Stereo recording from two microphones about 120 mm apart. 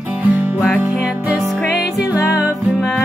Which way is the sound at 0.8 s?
5° right (ahead or behind).